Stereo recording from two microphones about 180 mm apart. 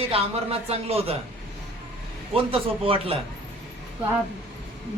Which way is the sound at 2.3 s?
30° right (ahead or behind).